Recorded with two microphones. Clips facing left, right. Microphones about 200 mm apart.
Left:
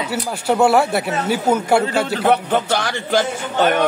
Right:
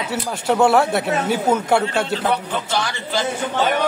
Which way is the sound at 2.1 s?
65° left (ahead or behind).